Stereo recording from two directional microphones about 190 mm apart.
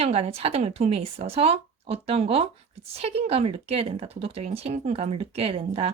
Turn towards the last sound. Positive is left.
turn(degrees=-30)  # may be behind; listen again after turning